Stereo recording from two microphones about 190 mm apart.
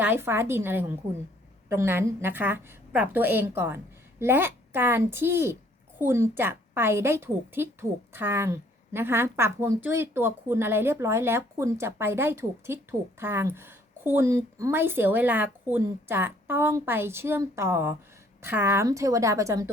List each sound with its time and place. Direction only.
0.0 s a woman's voice: 10° right (ahead or behind)